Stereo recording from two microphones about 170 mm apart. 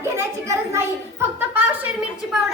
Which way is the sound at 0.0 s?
15° right (ahead or behind).